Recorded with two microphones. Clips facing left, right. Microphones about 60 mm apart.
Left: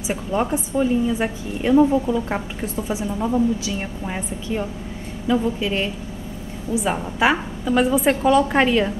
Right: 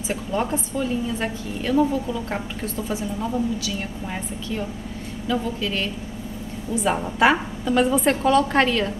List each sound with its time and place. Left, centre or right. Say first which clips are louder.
0.3 s a woman's voice: left 3 dB; centre
6.7 s a woman's voice: even; centre